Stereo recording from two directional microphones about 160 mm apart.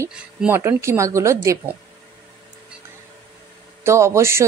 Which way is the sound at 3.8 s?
15° right (ahead or behind).